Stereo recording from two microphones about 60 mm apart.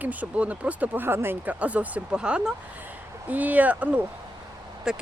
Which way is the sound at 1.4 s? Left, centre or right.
Right.